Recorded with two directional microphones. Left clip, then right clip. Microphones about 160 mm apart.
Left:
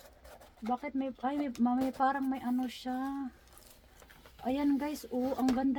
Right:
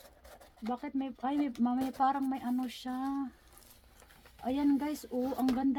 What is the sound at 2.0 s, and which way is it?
Speech, 35° right (ahead or behind).